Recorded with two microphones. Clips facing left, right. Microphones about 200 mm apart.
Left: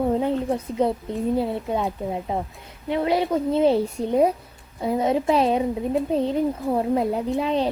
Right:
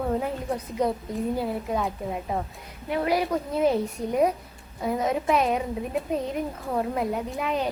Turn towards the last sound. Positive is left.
turn(degrees=30)  # may be behind; listen again after turning